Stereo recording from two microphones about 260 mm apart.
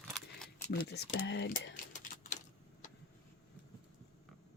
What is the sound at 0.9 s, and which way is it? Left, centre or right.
Speech, left.